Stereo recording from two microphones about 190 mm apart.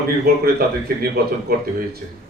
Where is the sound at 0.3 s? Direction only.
55° right (ahead or behind).